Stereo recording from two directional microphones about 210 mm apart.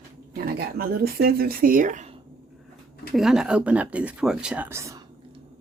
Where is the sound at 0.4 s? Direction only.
45° right (ahead or behind).